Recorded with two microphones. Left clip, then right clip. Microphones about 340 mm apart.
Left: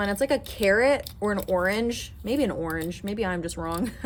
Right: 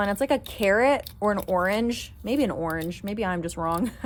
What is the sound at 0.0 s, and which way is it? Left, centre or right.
Speech, centre.